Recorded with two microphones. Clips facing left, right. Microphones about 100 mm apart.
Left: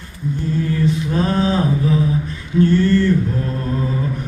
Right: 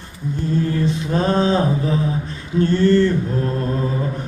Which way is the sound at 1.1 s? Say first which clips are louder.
Right 3 dB; 25° right (ahead or behind).